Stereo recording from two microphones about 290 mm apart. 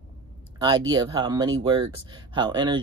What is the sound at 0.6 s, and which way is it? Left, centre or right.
Speech, centre.